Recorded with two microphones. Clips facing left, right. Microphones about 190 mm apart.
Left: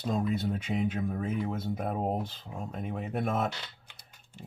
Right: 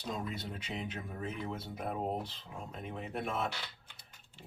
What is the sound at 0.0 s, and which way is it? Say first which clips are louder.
Speech: left 9 dB; 50° left (ahead or behind).